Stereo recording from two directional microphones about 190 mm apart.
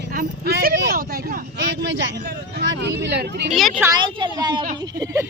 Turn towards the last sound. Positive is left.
turn(degrees=-15)  # may be behind; listen again after turning